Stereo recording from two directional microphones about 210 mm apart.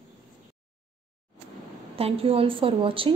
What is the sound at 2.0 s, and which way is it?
A woman's voice, 25° right (ahead or behind).